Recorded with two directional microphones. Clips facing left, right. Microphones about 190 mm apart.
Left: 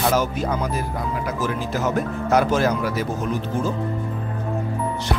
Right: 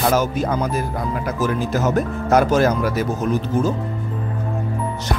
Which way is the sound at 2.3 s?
45° right (ahead or behind).